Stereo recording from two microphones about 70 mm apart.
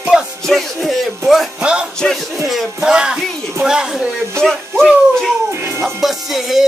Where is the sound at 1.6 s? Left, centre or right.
Centre.